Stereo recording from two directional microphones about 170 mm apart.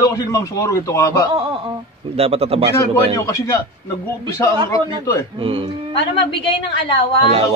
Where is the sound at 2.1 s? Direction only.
35° right (ahead or behind).